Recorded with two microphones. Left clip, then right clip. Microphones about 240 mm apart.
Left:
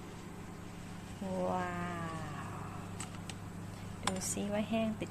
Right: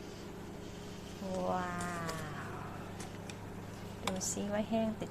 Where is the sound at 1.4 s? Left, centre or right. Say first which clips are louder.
Even; centre.